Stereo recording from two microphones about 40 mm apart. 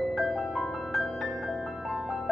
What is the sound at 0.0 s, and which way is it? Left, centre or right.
Music, centre.